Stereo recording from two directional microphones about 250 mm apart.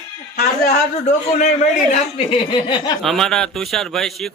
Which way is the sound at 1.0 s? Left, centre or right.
Left.